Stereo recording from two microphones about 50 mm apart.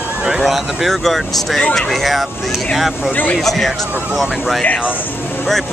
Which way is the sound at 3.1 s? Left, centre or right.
Left.